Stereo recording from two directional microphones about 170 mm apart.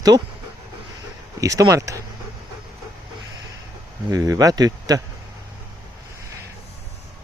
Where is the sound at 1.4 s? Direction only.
20° right (ahead or behind).